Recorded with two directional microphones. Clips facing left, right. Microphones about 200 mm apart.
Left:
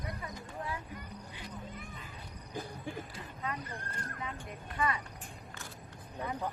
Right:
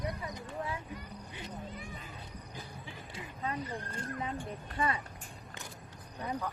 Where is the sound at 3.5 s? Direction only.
30° right (ahead or behind).